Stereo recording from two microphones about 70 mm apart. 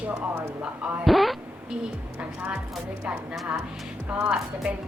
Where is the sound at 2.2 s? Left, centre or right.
Centre.